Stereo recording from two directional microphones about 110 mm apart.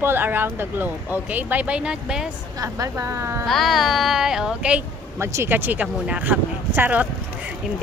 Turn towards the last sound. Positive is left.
turn(degrees=-15)  # may be behind; listen again after turning